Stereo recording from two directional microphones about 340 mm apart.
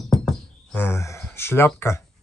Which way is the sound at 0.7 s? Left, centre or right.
Centre.